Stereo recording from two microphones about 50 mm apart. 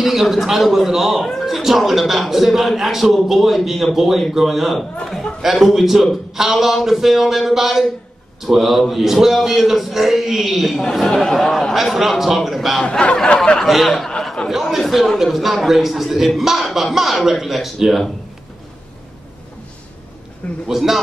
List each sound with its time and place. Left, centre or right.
0.0 s a man's voice: centre
11.2 s speech: centre
11.7 s a man's voice: centre
13.0 s a sound: centre
13.7 s a man's voice: centre
14.2 s speech: centre
14.5 s a man's voice: centre
20.6 s a man's voice: centre